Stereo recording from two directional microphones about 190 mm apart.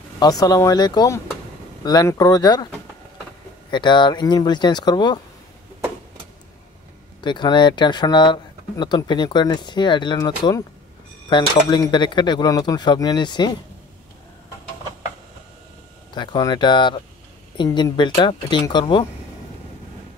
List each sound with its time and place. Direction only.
0.2 s speech: 20° left (ahead or behind)
3.7 s speech: 25° left (ahead or behind)
7.2 s speech: 25° left (ahead or behind)
16.2 s speech: 25° left (ahead or behind)